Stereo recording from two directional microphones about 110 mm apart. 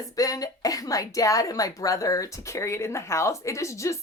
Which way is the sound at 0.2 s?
35° left (ahead or behind).